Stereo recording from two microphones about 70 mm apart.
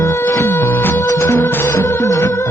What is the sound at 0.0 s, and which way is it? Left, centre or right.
Music, left.